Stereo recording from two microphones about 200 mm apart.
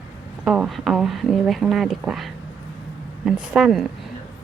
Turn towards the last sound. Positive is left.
turn(degrees=0)  # may be behind; listen again after turning